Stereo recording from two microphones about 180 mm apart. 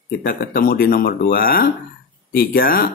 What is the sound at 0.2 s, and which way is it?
Speech, 60° left (ahead or behind).